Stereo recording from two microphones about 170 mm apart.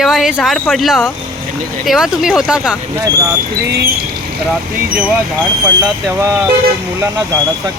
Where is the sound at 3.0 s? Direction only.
20° right (ahead or behind).